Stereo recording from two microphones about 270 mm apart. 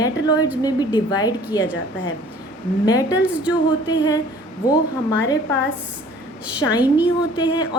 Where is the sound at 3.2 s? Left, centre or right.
Centre.